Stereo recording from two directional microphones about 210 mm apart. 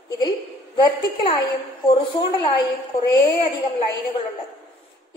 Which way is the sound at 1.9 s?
25° left (ahead or behind).